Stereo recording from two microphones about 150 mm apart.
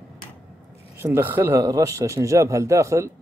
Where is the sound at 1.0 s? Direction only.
15° right (ahead or behind).